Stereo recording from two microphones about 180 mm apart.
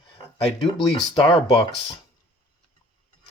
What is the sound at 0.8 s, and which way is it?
Speech, 30° left (ahead or behind).